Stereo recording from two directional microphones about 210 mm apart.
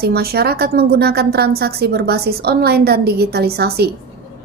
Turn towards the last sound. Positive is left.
turn(degrees=-50)  # may be behind; listen again after turning